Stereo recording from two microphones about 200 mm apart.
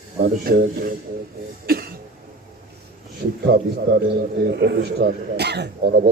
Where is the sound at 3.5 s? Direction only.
45° right (ahead or behind).